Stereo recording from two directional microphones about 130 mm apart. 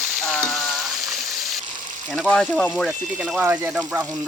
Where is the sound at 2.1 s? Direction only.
5° left (ahead or behind).